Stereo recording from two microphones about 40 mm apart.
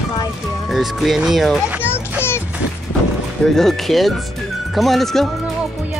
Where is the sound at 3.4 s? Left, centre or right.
Centre.